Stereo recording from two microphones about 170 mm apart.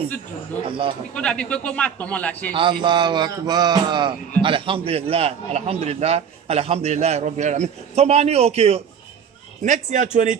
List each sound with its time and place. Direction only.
0.7 s a man's voice: 30° right (ahead or behind)
1.1 s a man's voice: 5° left (ahead or behind)
2.5 s a man's voice: 30° right (ahead or behind)
9.6 s a man's voice: 45° right (ahead or behind)